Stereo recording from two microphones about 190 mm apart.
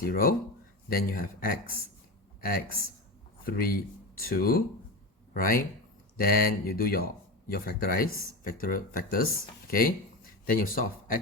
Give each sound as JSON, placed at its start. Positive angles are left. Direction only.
{"t": 0.0, "sound": "a man's voice", "side_deg": 50}
{"t": 10.4, "sound": "speech", "side_deg": 50}